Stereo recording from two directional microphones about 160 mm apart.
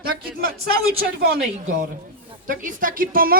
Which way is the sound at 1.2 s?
90° right.